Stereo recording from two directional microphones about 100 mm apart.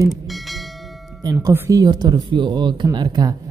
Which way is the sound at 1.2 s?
35° right (ahead or behind).